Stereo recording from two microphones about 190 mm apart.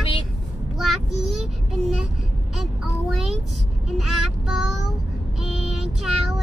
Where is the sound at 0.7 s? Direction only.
Centre (ahead or behind).